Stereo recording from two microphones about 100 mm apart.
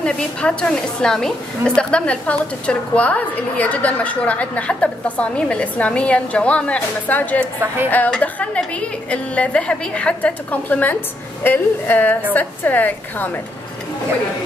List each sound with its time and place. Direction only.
0.0 s a woman's voice: 10° left (ahead or behind)
7.6 s speech: 20° right (ahead or behind)
8.2 s a woman's voice: 15° left (ahead or behind)